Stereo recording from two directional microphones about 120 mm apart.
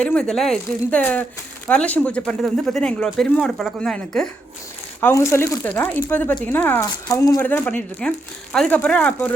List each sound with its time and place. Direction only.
0.0 s speech: 10° left (ahead or behind)
4.9 s speech: 20° left (ahead or behind)
7.1 s speech: 25° left (ahead or behind); by 9.3 s 10° left (ahead or behind)